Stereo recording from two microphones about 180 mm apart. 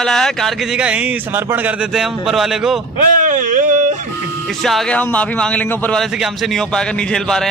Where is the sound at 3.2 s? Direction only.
45° right (ahead or behind).